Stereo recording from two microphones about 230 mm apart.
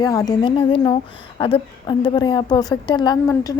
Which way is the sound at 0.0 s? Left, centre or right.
Centre.